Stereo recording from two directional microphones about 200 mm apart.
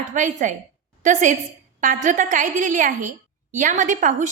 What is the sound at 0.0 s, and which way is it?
A woman's voice, 40° right (ahead or behind).